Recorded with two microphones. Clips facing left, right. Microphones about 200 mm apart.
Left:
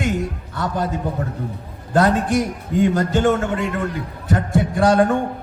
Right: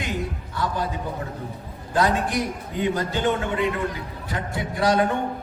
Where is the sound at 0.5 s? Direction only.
60° left (ahead or behind).